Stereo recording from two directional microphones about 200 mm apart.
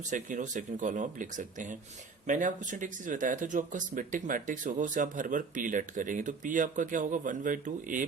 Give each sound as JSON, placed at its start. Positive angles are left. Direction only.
{"t": 0.1, "sound": "speech", "side_deg": -40}